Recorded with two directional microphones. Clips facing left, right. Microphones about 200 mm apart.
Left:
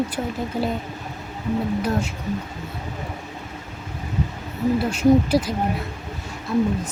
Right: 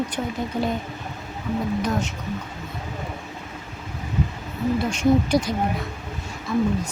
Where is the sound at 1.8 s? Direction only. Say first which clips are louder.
Left 1 dB; 10° left (ahead or behind).